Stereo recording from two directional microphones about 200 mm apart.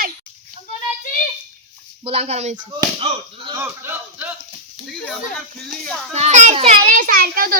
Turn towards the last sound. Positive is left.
turn(degrees=-45)  # may be behind; listen again after turning